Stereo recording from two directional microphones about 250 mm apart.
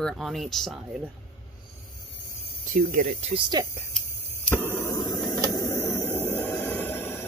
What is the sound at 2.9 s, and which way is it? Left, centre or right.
Speech, right.